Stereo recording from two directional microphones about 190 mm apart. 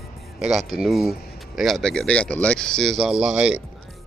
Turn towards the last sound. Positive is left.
turn(degrees=-5)  # may be behind; listen again after turning